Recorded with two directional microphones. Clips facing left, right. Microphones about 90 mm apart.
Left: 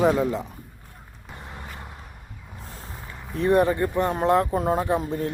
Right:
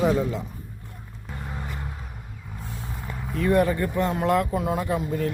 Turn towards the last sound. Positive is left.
turn(degrees=30)  # may be behind; listen again after turning